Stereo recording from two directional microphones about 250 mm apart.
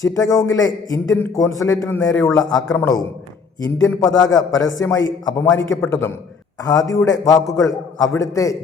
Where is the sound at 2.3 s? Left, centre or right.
Centre.